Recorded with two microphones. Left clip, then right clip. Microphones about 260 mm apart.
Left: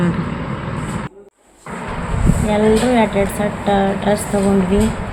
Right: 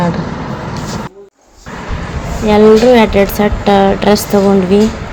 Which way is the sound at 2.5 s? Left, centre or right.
Centre.